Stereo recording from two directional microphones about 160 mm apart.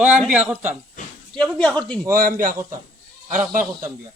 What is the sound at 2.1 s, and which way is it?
A man's voice, 60° right (ahead or behind).